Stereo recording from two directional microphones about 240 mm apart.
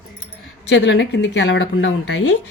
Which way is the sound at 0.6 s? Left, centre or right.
Left.